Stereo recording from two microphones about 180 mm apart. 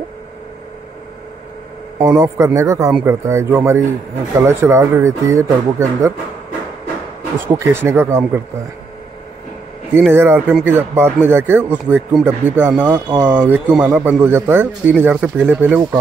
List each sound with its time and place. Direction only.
2.0 s speech: 15° right (ahead or behind)
7.3 s speech: 15° right (ahead or behind)
9.9 s speech: 10° right (ahead or behind)